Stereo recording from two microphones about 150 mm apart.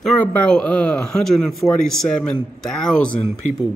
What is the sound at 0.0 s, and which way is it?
Speech, 10° left (ahead or behind).